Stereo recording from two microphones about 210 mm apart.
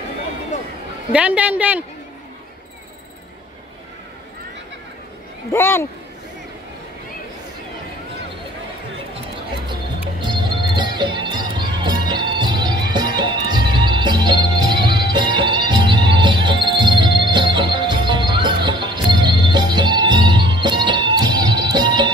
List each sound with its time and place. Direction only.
1.1 s a man's voice: 5° right (ahead or behind)
5.5 s speech: 10° left (ahead or behind)
10.2 s music: 20° right (ahead or behind)